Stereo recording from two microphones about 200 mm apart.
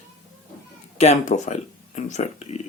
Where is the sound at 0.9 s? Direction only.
35° left (ahead or behind).